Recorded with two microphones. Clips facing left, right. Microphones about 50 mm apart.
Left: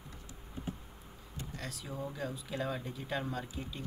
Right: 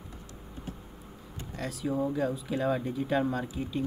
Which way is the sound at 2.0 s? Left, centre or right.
Right.